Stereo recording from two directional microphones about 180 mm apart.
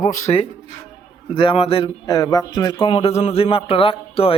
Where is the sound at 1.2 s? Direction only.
30° left (ahead or behind).